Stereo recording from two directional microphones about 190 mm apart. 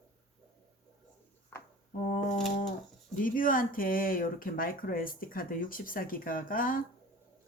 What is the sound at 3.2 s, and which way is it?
A woman's voice, 45° left (ahead or behind).